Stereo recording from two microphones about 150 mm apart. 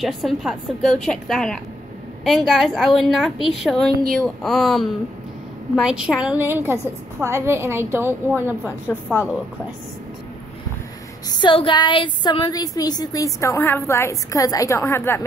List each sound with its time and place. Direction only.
0.0 s a woman's voice: centre (ahead or behind)
11.2 s a woman's voice: 30° left (ahead or behind); by 15.2 s 15° left (ahead or behind)